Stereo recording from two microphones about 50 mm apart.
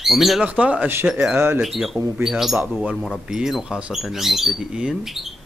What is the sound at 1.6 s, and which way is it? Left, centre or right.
Speech, centre.